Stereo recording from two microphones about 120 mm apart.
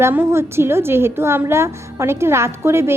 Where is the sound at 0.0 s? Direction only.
20° right (ahead or behind).